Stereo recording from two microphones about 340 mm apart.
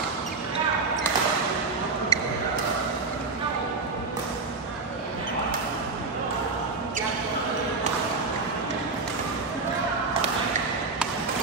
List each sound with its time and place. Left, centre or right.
2.1 s basketball bounce: centre